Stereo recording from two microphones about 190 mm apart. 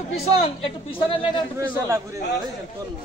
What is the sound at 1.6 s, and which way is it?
Speech, 15° right (ahead or behind).